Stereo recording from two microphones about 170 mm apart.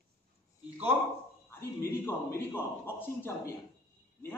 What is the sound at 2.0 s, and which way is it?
A man's voice, 15° left (ahead or behind).